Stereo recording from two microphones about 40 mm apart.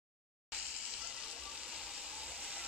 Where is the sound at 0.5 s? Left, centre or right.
Centre.